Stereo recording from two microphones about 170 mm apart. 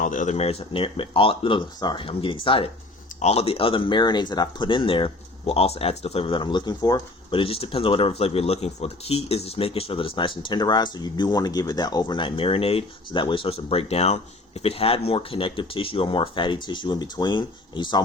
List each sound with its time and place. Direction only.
0.0 s speech: 50° left (ahead or behind); by 18.0 s 25° left (ahead or behind)